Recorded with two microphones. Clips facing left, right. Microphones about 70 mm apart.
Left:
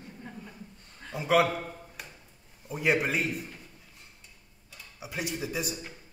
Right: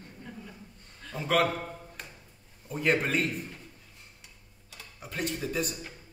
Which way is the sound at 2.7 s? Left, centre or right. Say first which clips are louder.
Even; centre.